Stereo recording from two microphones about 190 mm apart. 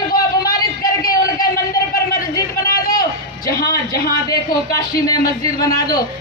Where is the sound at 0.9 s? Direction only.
50° left (ahead or behind).